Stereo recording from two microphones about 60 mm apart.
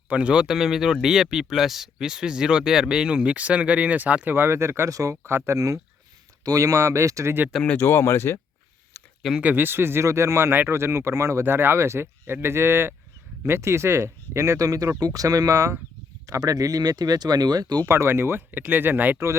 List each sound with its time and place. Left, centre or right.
0.1 s speech: centre
4.3 s speech: right
4.9 s speech: right
5.2 s speech: right
6.4 s speech: right
7.8 s speech: left
8.9 s a sound: left
9.4 s speech: right
15.0 s speech: right
17.8 s speech: right